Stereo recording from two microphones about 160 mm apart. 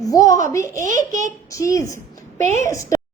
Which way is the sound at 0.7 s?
55° right (ahead or behind).